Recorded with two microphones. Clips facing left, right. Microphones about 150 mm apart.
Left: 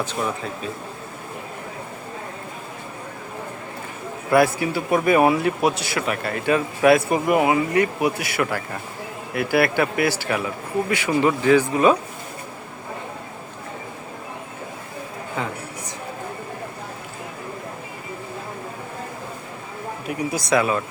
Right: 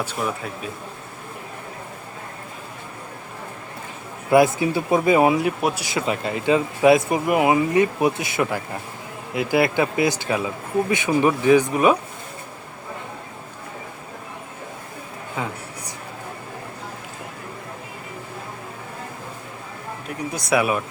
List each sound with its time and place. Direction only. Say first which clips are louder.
0.0 s speech: left 1 dB; 5° right (ahead or behind)
4.3 s speech: right 2 dB; 20° right (ahead or behind)
20.1 s a sound: left 4 dB; 5° left (ahead or behind)
20.5 s speech: even; 10° right (ahead or behind)